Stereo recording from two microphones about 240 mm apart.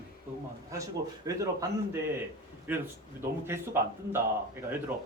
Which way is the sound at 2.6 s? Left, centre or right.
Centre.